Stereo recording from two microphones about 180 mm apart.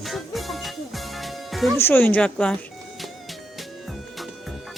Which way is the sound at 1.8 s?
10° left (ahead or behind).